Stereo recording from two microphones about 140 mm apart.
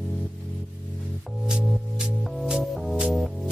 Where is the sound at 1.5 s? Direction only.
5° right (ahead or behind).